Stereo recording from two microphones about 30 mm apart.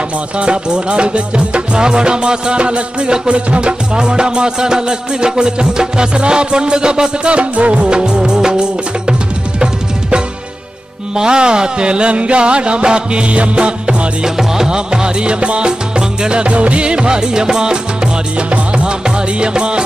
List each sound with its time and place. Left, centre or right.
0.4 s music: right
3.9 s music: right
11.1 s music: right
14.2 s music: centre
14.7 s music: right